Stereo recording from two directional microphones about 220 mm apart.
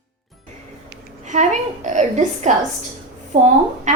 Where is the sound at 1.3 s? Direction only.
35° right (ahead or behind).